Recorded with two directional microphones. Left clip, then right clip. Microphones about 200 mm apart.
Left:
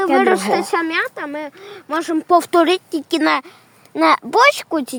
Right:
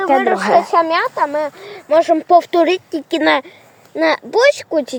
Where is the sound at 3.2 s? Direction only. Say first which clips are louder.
Right 4 dB; 35° left (ahead or behind).